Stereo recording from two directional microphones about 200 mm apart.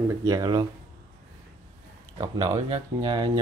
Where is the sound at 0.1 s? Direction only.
20° right (ahead or behind).